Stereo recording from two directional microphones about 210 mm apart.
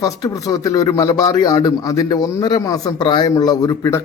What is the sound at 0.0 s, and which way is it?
A man's voice, 15° left (ahead or behind).